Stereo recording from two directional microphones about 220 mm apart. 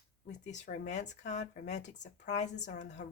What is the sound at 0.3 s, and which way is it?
Speech, 35° left (ahead or behind).